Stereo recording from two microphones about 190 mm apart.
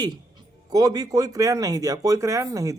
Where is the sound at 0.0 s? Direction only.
20° right (ahead or behind).